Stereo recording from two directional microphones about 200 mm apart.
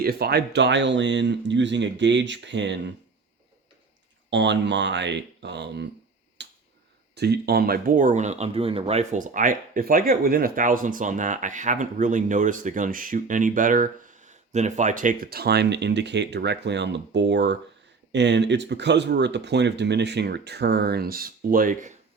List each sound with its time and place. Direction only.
0.0 s speech: 50° right (ahead or behind)
4.3 s speech: 60° right (ahead or behind)
6.4 s finger snapping: 60° right (ahead or behind)
7.2 s speech: 55° right (ahead or behind)